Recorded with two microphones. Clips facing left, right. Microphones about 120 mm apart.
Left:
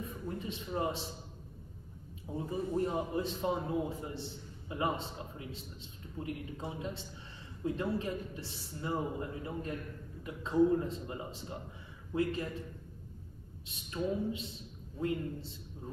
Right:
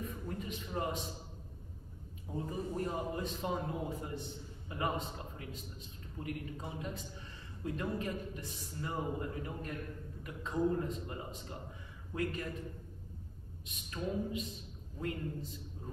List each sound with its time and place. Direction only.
0.0 s a man's voice: 25° left (ahead or behind)
2.3 s a man's voice: 25° left (ahead or behind)
13.7 s a man's voice: 30° left (ahead or behind)